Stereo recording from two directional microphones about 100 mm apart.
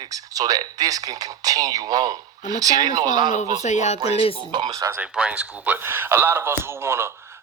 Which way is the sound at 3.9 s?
50° right (ahead or behind).